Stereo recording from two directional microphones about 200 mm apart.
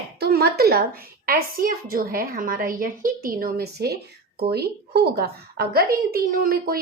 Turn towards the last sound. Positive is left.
turn(degrees=-50)  # may be behind; listen again after turning